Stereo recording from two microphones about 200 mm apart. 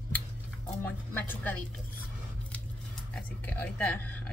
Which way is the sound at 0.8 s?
10° left (ahead or behind).